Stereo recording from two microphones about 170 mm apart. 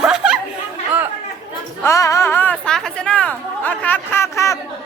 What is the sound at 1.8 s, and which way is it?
Chatter, 15° left (ahead or behind).